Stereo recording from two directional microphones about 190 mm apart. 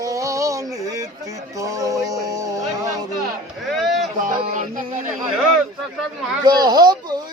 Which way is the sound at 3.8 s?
Centre (ahead or behind).